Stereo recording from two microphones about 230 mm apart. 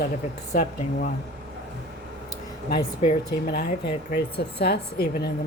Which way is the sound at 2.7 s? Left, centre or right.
Left.